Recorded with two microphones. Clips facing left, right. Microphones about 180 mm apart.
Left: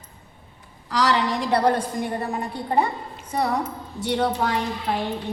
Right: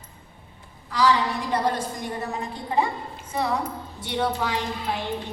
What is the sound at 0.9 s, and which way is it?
Speech, 80° left.